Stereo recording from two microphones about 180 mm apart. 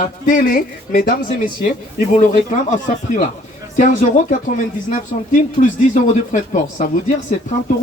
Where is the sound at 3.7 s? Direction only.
45° left (ahead or behind).